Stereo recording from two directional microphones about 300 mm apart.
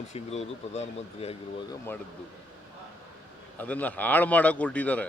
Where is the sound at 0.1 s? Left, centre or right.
Left.